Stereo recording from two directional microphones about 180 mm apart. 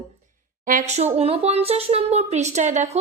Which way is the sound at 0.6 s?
50° right (ahead or behind).